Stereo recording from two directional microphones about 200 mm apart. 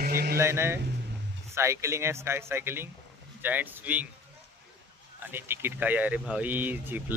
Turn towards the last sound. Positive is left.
turn(degrees=-10)  # may be behind; listen again after turning